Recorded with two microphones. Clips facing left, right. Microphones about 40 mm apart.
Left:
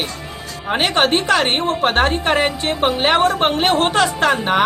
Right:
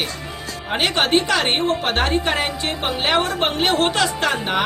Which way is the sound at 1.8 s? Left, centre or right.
Left.